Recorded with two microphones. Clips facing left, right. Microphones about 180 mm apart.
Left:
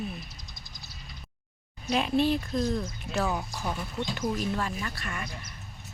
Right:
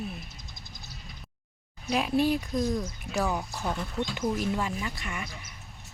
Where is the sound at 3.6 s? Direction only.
10° left (ahead or behind).